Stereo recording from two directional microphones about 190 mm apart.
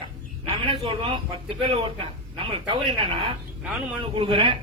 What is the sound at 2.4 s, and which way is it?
Speech, 25° right (ahead or behind).